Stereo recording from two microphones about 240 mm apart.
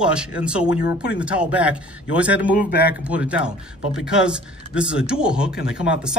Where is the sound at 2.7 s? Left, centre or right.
Left.